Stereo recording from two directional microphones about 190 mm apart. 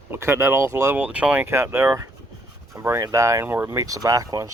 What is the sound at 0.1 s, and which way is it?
Speech, 15° right (ahead or behind).